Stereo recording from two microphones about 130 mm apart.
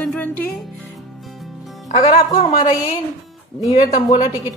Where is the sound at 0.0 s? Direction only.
10° left (ahead or behind).